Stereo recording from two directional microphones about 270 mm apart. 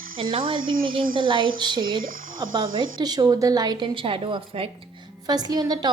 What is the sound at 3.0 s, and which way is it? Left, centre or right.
A woman's voice, centre.